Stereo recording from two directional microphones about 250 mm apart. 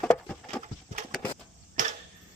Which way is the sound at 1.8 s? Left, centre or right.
Right.